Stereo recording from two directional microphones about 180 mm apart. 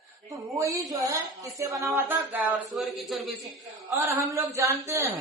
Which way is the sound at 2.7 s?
Centre (ahead or behind).